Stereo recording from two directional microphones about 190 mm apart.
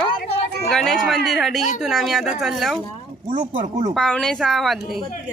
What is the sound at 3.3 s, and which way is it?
Speech, 35° right (ahead or behind).